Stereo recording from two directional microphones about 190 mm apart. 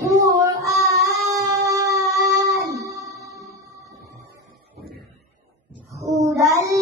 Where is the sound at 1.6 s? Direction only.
15° right (ahead or behind).